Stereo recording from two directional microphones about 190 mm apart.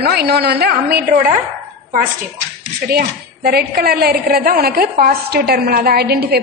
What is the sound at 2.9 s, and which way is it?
A woman's voice, 55° right (ahead or behind).